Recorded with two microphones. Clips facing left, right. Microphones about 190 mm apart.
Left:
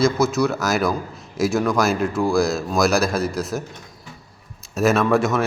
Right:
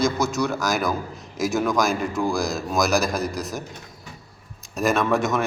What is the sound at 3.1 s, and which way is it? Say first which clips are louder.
Speech: left 4 dB; 15° right (ahead or behind).